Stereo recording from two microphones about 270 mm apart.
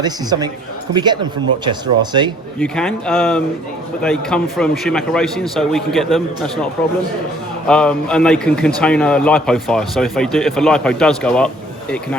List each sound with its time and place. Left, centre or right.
0.0 s speech: centre
2.6 s a man's voice: centre
7.7 s a man's voice: centre